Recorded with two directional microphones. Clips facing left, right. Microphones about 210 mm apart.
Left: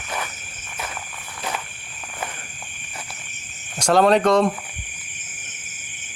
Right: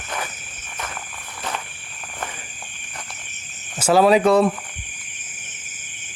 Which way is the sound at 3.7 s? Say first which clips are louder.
Right 1 dB; 5° right (ahead or behind).